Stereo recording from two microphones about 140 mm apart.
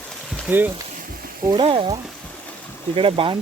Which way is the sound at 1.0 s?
90° right.